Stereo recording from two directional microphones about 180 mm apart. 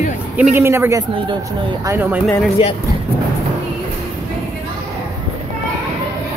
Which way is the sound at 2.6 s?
30° left (ahead or behind).